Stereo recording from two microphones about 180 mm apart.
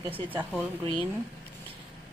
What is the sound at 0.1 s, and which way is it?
Speech, 10° right (ahead or behind).